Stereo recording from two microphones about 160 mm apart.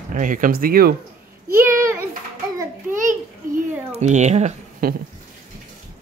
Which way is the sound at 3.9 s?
45° right (ahead or behind).